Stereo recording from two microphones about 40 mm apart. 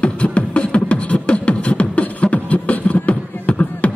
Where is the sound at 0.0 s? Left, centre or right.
Left.